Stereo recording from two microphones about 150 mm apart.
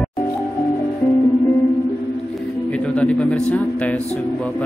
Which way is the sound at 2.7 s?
10° left (ahead or behind).